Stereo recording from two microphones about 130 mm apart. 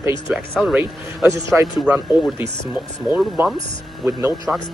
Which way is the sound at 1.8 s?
Centre (ahead or behind).